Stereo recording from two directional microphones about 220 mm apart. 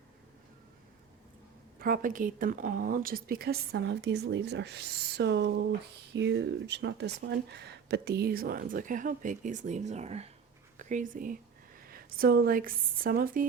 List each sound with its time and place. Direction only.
1.8 s a woman's voice: 40° right (ahead or behind)